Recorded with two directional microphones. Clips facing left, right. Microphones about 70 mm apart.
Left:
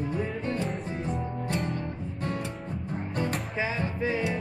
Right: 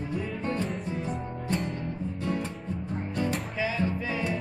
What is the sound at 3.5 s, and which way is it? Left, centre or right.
Music, left.